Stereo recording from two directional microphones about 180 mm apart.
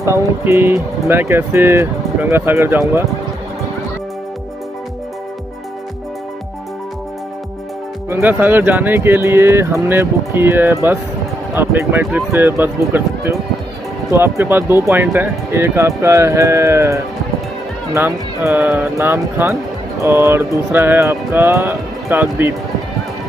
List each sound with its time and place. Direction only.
0.0 s speech: 15° right (ahead or behind)
8.1 s speech: 10° right (ahead or behind)